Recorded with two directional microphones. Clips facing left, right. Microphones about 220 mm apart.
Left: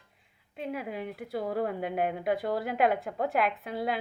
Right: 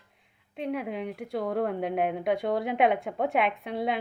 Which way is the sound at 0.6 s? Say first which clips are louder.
Right 4 dB; centre (ahead or behind).